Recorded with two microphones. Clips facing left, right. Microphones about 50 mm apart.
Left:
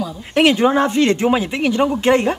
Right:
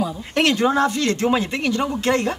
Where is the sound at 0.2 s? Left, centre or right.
Centre.